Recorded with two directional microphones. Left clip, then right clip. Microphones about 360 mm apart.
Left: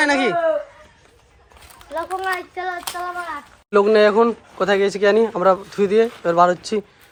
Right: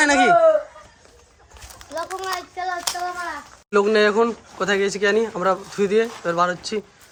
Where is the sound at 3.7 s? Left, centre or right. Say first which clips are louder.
Left 3 dB; centre.